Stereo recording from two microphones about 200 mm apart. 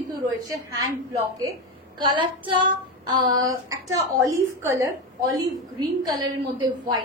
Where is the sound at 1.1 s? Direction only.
15° right (ahead or behind).